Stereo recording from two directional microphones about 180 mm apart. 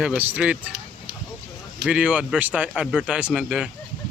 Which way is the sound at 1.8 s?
5° right (ahead or behind).